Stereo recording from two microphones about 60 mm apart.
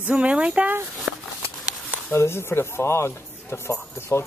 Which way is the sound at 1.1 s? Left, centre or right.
Right.